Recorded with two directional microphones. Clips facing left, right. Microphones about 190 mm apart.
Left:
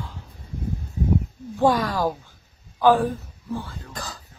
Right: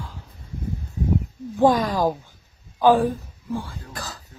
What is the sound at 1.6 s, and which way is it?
A woman's voice, 15° right (ahead or behind).